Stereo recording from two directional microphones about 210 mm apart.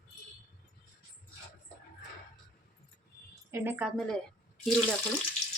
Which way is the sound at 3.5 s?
10° right (ahead or behind).